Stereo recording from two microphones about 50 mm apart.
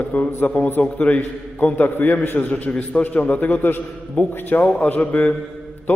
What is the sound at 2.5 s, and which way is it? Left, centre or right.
A man's voice, left.